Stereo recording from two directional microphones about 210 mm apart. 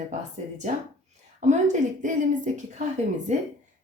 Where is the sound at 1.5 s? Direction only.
35° right (ahead or behind).